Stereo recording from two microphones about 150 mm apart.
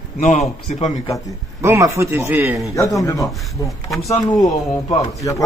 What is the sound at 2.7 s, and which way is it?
Speech, 20° left (ahead or behind).